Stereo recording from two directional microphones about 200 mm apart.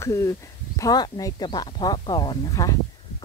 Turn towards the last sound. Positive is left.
turn(degrees=15)  # may be behind; listen again after turning